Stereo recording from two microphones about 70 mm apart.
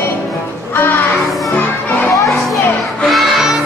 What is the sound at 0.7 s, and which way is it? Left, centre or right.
Music, left.